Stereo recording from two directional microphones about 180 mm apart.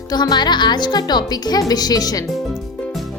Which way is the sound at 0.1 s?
25° left (ahead or behind).